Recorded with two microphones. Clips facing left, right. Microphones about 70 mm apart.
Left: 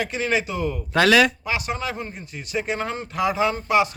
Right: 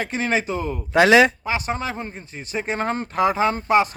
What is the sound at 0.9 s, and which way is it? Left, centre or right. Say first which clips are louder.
A man's voice: right 3 dB; right.